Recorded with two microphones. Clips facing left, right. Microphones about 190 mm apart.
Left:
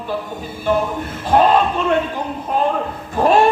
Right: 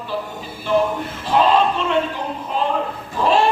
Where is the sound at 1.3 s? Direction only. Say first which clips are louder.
Left 2 dB; 50° left (ahead or behind).